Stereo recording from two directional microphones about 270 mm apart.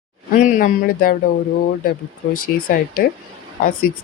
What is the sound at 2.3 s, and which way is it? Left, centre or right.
Speech, left.